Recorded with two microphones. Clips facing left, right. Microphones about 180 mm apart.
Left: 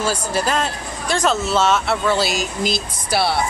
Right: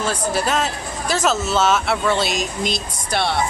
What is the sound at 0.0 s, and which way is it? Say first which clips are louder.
A man's voice: even; centre (ahead or behind).